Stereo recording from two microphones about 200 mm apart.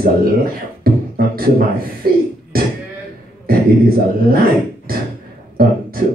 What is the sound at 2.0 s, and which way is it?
Speech, 50° right (ahead or behind).